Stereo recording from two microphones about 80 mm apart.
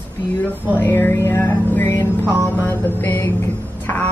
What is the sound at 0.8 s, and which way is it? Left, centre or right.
Music, left.